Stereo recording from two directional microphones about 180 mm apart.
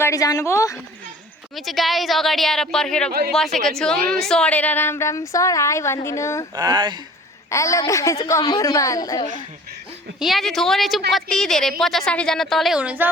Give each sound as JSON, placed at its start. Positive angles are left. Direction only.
{"t": 0.0, "sound": "speech", "side_deg": 20}
{"t": 1.5, "sound": "a woman's voice", "side_deg": 0}
{"t": 3.1, "sound": "speech", "side_deg": -60}
{"t": 3.3, "sound": "a woman's voice", "side_deg": 0}
{"t": 6.6, "sound": "speech", "side_deg": -25}
{"t": 7.5, "sound": "a woman's voice", "side_deg": 15}
{"t": 10.2, "sound": "a woman's voice", "side_deg": 0}